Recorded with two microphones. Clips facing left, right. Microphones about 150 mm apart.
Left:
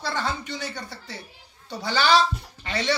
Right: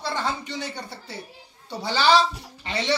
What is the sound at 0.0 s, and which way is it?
Speech, 25° right (ahead or behind).